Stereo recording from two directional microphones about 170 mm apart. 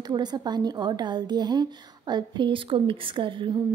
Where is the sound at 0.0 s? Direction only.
25° right (ahead or behind).